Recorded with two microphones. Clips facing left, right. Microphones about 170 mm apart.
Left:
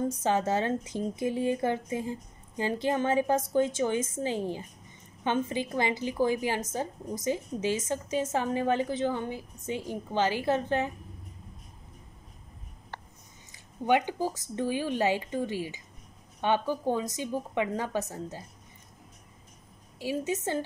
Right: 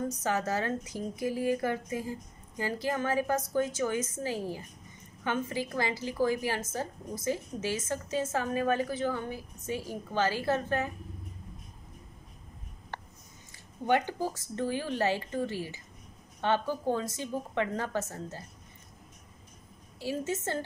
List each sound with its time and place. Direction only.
0.2 s a woman's voice: 25° left (ahead or behind)
13.8 s a woman's voice: 15° left (ahead or behind)
20.0 s a woman's voice: 15° left (ahead or behind)